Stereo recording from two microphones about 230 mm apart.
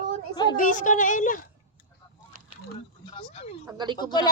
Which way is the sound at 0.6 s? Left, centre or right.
Left.